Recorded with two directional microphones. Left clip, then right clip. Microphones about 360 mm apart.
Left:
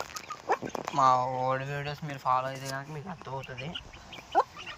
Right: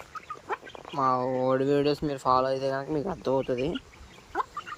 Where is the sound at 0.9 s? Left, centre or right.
Centre.